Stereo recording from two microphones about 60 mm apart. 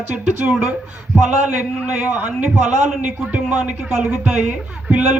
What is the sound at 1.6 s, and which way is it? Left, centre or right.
Speech, right.